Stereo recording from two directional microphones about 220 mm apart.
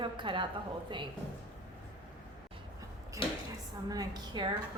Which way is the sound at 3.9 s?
15° right (ahead or behind).